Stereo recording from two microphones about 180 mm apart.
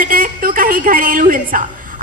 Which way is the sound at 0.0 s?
50° right (ahead or behind).